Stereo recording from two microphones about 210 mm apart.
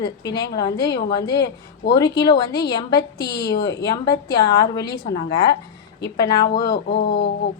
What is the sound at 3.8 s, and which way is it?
A woman's voice, 20° left (ahead or behind).